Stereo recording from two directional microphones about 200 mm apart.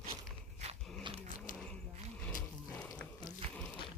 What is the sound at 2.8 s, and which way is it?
Music, 15° left (ahead or behind).